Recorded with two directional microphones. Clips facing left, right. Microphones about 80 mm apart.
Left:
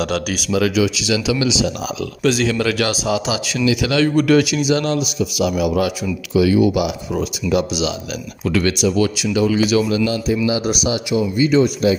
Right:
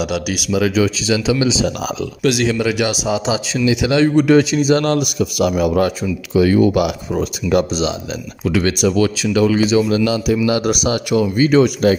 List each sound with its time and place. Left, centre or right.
0.0 s speech: centre
0.7 s speech: right
2.6 s speech: centre; by 9.7 s right
9.7 s speech: right
10.0 s speech: right
10.4 s speech: right